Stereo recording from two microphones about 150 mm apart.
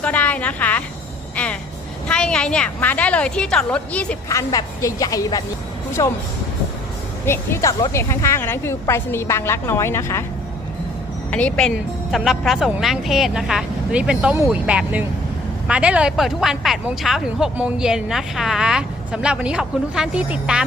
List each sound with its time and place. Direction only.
0.0 s a woman's voice: 10° left (ahead or behind)
2.0 s a woman's voice: 5° left (ahead or behind)
4.3 s a woman's voice: 20° left (ahead or behind)
7.3 s a woman's voice: 20° left (ahead or behind)
11.3 s a woman's voice: 10° left (ahead or behind)
11.7 s speech: 5° right (ahead or behind)